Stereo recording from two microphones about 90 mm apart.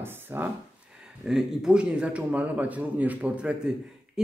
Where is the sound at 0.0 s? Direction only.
25° right (ahead or behind).